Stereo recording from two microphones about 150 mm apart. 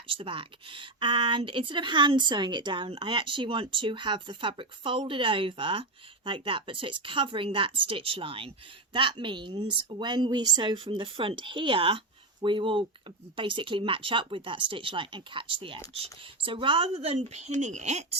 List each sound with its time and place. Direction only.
0.1 s a woman's voice: 35° right (ahead or behind)